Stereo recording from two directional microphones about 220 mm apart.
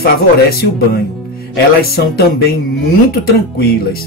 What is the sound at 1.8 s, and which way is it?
Speech, 45° left (ahead or behind).